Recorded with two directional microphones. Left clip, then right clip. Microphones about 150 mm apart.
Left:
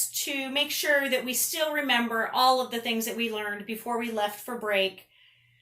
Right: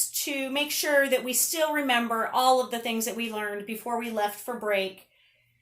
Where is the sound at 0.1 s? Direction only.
65° right (ahead or behind).